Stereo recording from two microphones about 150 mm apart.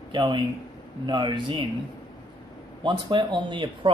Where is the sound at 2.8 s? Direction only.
30° right (ahead or behind).